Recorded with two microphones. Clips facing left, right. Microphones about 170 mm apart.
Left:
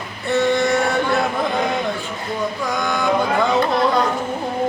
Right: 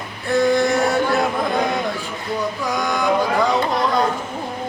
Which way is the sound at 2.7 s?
Centre (ahead or behind).